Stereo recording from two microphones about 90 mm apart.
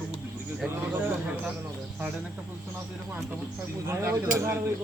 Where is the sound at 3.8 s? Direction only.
30° right (ahead or behind).